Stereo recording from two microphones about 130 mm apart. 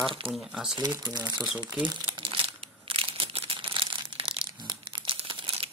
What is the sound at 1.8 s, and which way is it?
Crumpling, 35° right (ahead or behind).